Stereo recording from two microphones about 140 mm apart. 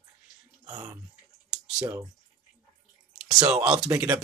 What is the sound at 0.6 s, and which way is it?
Speech, 25° right (ahead or behind).